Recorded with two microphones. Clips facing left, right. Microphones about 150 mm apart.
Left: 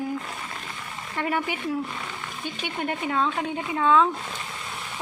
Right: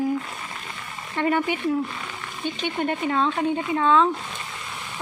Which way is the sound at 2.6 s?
5° left (ahead or behind).